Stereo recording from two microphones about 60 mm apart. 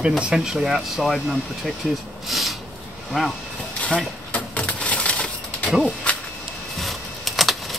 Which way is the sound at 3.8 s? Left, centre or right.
Left.